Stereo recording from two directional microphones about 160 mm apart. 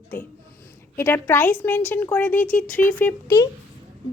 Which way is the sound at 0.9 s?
15° left (ahead or behind).